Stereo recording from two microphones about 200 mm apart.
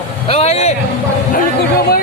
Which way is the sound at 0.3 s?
30° left (ahead or behind).